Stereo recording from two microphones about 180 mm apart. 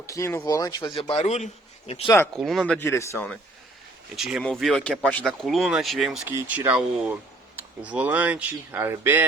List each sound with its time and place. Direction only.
0.0 s speech: 15° left (ahead or behind); by 1.5 s 40° left (ahead or behind)
2.0 s speech: 10° left (ahead or behind)
2.3 s speech: centre (ahead or behind)
2.7 s speech: 15° left (ahead or behind)
4.1 s speech: centre (ahead or behind)